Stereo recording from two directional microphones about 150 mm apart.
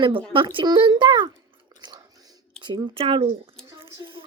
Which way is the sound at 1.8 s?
30° right (ahead or behind).